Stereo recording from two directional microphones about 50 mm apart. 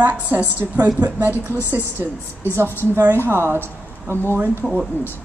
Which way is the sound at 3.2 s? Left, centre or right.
Right.